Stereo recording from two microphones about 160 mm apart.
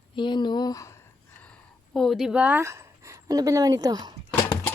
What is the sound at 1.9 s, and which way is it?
A woman's voice, centre (ahead or behind).